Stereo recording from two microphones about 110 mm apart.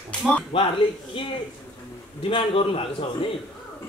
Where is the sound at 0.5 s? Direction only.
55° left (ahead or behind).